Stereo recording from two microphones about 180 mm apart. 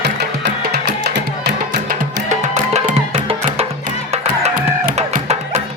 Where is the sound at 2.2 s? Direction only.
40° right (ahead or behind).